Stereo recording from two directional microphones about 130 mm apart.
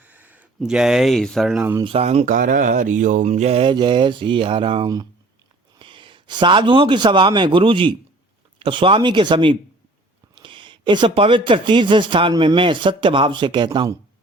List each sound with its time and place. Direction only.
0.0 s speech: 10° right (ahead or behind)
1.8 s speech: 50° right (ahead or behind)
3.6 s a man's voice: 35° right (ahead or behind)